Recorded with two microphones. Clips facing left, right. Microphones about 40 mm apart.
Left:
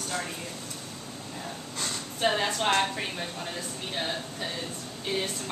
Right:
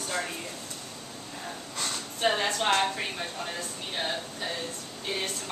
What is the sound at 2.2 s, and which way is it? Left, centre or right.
A woman's voice, centre.